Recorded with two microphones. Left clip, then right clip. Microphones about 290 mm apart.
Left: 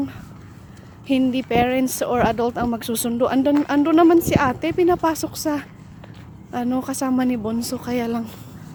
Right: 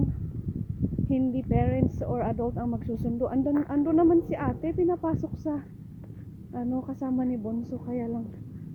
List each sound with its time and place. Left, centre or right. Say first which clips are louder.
1.1 s speech: left 10 dB; left